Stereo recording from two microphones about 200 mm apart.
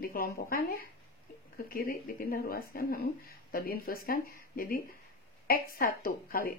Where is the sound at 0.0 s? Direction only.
45° left (ahead or behind).